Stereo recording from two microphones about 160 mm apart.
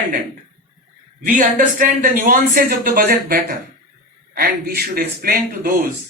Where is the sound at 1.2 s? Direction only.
55° right (ahead or behind).